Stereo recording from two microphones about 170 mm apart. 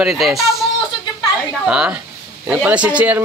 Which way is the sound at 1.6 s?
5° right (ahead or behind).